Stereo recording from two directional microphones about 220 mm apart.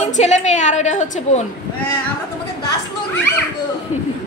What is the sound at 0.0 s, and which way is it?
A woman's voice, 30° left (ahead or behind).